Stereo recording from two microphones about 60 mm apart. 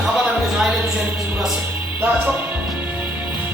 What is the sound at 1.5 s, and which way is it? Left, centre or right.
Speech, right.